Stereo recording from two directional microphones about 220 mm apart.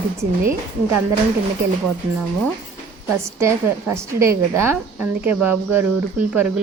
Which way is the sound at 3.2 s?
10° right (ahead or behind).